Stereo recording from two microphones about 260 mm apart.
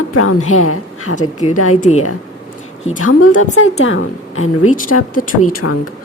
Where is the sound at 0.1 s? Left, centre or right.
Left.